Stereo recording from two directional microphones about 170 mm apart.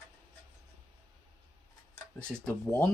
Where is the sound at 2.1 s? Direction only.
5° left (ahead or behind).